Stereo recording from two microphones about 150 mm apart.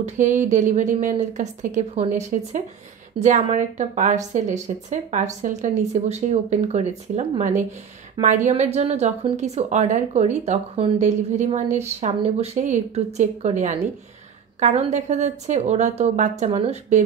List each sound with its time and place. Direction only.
0.0 s a woman's voice: 55° right (ahead or behind)